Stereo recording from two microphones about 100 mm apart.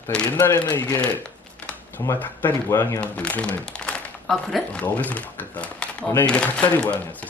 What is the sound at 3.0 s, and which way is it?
Speech, 15° left (ahead or behind).